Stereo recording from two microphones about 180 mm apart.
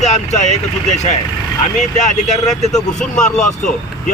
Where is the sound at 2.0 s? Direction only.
40° left (ahead or behind).